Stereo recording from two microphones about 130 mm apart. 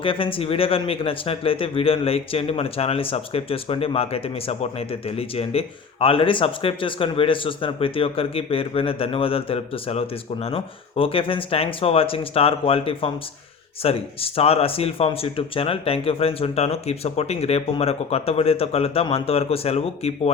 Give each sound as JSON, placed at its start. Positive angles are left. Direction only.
{"t": 0.0, "sound": "a man's voice", "side_deg": 45}